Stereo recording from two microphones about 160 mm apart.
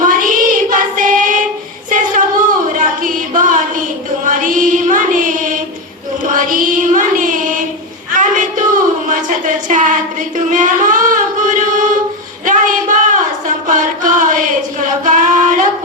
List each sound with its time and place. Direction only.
0.0 s child singing: 55° right (ahead or behind)
2.7 s music: 55° right (ahead or behind)
8.1 s a sound: 55° right (ahead or behind)